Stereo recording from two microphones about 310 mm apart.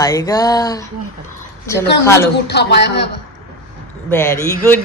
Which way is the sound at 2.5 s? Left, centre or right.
Left.